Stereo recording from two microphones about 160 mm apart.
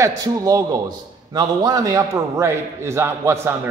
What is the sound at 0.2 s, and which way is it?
A man's voice, 20° right (ahead or behind).